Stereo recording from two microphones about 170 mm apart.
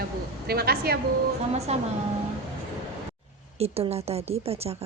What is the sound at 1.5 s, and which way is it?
Speech, 40° right (ahead or behind).